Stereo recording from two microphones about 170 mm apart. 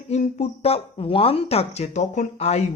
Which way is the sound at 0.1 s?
40° left (ahead or behind).